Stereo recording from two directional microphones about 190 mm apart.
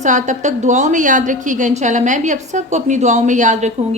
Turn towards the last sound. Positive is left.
turn(degrees=-40)  # may be behind; listen again after turning